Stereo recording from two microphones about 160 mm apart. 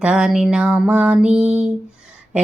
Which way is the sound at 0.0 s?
5° right (ahead or behind).